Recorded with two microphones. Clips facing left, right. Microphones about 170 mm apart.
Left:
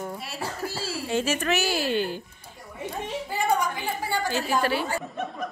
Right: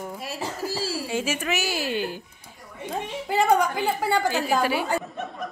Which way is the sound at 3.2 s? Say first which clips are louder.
Right 5 dB; 70° right (ahead or behind).